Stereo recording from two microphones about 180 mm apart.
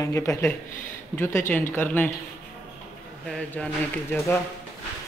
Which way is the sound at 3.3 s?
5° left (ahead or behind).